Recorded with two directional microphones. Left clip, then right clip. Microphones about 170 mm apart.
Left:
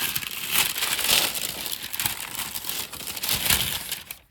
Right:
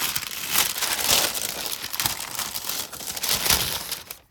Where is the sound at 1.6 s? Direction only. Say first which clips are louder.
Right 2 dB; 30° right (ahead or behind).